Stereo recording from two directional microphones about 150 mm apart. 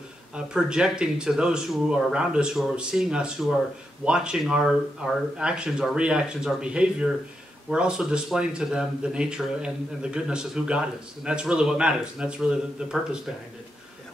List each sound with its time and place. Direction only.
0.5 s speech: 5° right (ahead or behind)